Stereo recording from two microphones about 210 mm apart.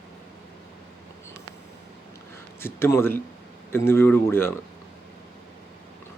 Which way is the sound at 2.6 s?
10° left (ahead or behind).